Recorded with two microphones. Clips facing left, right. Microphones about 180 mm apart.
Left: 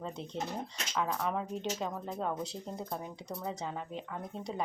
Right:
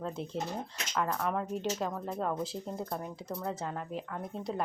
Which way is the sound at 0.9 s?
5° left (ahead or behind).